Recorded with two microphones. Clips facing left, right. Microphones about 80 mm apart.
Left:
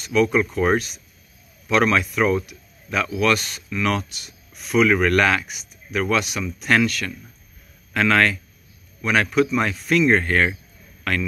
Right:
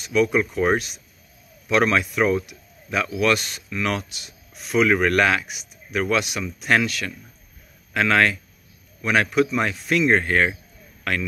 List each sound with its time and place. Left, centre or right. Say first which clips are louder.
0.0 s speech: left 1 dB; centre